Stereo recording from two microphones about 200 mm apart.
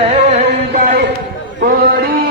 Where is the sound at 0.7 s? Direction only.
40° right (ahead or behind).